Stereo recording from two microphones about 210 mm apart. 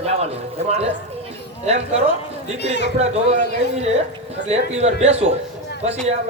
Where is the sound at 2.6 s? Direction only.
55° left (ahead or behind).